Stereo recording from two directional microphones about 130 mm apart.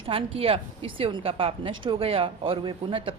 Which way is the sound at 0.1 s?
50° right (ahead or behind).